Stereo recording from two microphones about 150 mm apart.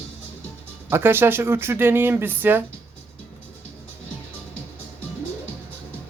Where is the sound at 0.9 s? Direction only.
15° right (ahead or behind).